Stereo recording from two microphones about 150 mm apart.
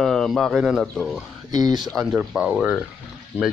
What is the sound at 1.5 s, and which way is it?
Speech, 25° right (ahead or behind).